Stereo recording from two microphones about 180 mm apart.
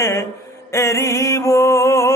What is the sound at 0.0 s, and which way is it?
Mantra, 15° left (ahead or behind).